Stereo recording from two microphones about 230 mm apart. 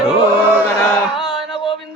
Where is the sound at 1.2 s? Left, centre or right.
Centre.